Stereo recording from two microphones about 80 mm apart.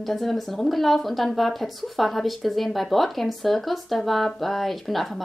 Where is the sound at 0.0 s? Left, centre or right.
Centre.